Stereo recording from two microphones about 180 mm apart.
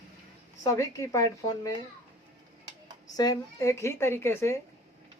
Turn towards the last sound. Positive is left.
turn(degrees=15)  # may be behind; listen again after turning